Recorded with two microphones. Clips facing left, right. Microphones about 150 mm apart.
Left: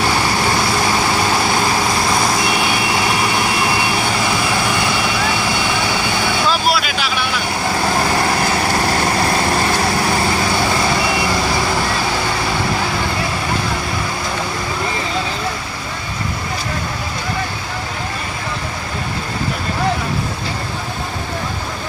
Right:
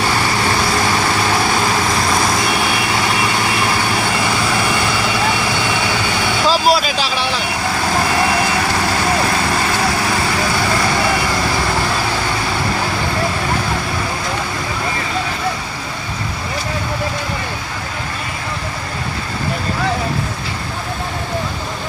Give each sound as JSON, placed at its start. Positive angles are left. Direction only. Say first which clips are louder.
{"t": 6.5, "sound": "vehicle", "louder": "right 3 dB", "side_deg": -35}